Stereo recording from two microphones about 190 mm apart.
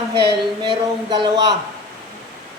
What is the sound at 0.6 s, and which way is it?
Speech, 25° right (ahead or behind).